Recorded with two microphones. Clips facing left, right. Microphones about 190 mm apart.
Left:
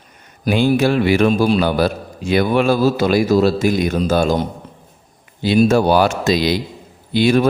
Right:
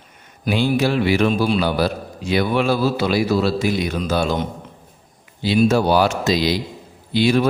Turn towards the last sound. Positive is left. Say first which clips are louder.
# left 3 dB
turn(degrees=50)  # may be behind; listen again after turning